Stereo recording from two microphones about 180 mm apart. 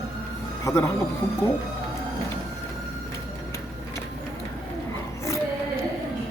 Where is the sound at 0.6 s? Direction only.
15° left (ahead or behind).